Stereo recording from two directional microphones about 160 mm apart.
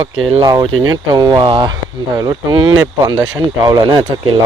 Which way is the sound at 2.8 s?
25° right (ahead or behind).